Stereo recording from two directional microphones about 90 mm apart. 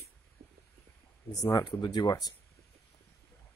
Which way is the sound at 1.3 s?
45° left (ahead or behind).